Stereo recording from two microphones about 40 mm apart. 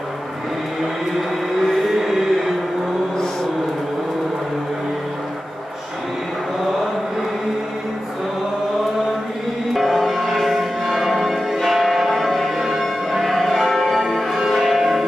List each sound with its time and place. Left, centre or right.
1.7 s music: centre
9.8 s music: centre